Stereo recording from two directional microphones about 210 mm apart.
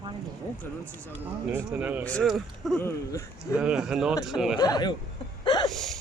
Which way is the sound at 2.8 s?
10° left (ahead or behind).